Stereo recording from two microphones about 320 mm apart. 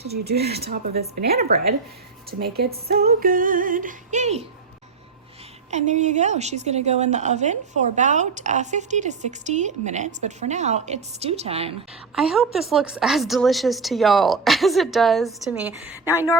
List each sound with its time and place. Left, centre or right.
0.1 s a woman's voice: right
5.7 s a woman's voice: right
12.1 s a woman's voice: centre